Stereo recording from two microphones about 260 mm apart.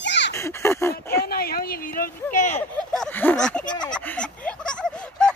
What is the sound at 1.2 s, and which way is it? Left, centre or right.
Speech, left.